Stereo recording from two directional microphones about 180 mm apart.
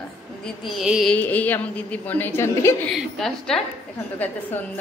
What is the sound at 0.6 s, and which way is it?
Speech, centre (ahead or behind).